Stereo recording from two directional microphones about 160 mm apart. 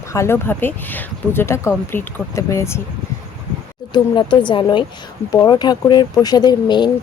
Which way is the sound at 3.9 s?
30° left (ahead or behind).